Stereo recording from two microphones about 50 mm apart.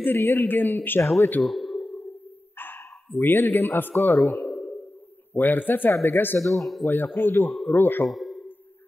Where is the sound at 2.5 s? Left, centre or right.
Left.